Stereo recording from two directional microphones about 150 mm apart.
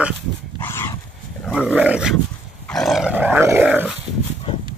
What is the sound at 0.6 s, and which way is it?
Dog, 15° left (ahead or behind).